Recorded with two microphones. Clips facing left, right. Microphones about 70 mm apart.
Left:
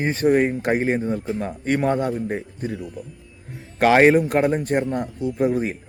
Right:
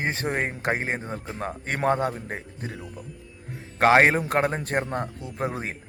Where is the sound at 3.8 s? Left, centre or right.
Right.